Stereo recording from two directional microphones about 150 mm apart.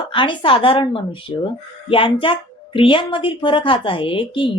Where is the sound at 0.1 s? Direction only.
35° left (ahead or behind).